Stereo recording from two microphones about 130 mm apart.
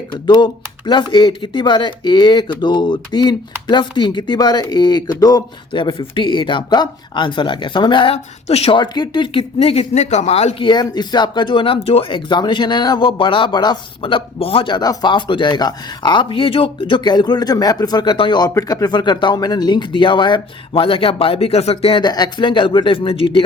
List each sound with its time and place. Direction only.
0.1 s speech: 35° left (ahead or behind)
8.1 s speech: 50° left (ahead or behind)
10.7 s speech: 35° left (ahead or behind)
22.0 s speech: 30° left (ahead or behind)